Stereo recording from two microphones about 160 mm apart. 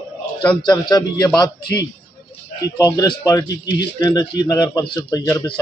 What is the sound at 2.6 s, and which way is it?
Speech, 20° left (ahead or behind).